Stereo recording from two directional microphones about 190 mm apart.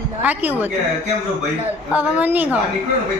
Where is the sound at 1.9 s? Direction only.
10° right (ahead or behind).